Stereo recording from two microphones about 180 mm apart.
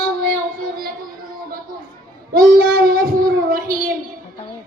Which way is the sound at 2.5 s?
60° right (ahead or behind).